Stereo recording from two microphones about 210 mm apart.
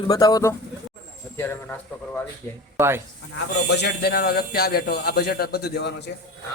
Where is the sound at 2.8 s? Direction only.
10° right (ahead or behind).